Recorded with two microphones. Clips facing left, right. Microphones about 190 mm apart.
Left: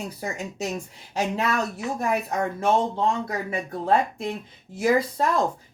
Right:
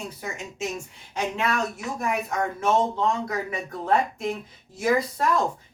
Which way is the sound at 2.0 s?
35° left (ahead or behind).